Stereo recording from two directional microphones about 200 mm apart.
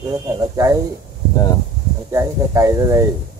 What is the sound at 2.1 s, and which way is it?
Speech, 15° right (ahead or behind).